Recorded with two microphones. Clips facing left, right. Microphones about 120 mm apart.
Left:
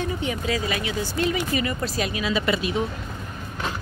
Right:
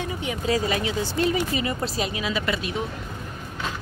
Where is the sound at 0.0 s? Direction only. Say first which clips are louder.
Left 2 dB; 15° right (ahead or behind).